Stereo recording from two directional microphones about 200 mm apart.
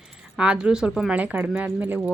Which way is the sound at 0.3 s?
5° right (ahead or behind).